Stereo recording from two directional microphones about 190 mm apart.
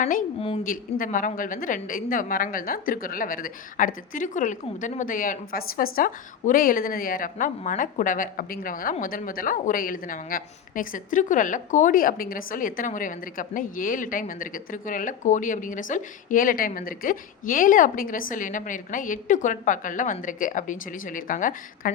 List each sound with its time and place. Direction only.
0.0 s a woman's voice: 45° left (ahead or behind)
0.3 s a woman's voice: 30° left (ahead or behind)
0.6 s a woman's voice: 45° left (ahead or behind)